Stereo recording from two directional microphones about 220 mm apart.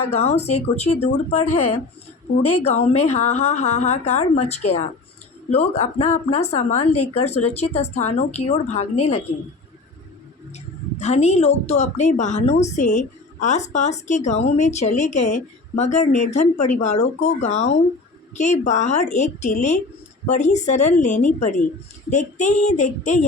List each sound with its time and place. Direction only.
0.1 s a woman's voice: 30° left (ahead or behind)
1.5 s speech: 90° left
2.6 s a woman's voice: 30° left (ahead or behind)
11.0 s a woman's voice: 30° left (ahead or behind)